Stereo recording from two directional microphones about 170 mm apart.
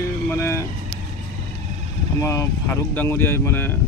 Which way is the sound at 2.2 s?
20° left (ahead or behind).